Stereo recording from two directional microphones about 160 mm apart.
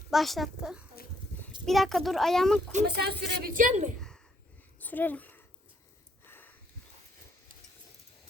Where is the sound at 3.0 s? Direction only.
80° right; by 3.9 s 50° right (ahead or behind).